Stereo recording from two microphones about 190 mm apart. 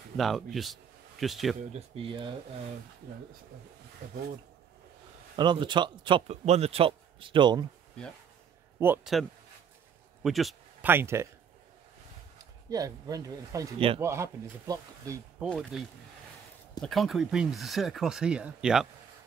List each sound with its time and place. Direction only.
0.2 s speech: centre (ahead or behind)
1.6 s a man's voice: 35° right (ahead or behind)
5.3 s a man's voice: 25° right (ahead or behind)
8.7 s a man's voice: 10° right (ahead or behind)
10.2 s a sound: centre (ahead or behind)
10.9 s speech: 10° right (ahead or behind)
12.6 s a man's voice: 20° right (ahead or behind)
13.7 s a man's voice: 30° right (ahead or behind)
14.0 s speech: 15° right (ahead or behind)
15.7 s speech: 5° right (ahead or behind)